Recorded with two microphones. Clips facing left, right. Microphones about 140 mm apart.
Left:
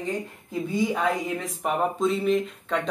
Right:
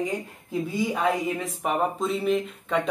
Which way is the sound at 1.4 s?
Centre (ahead or behind).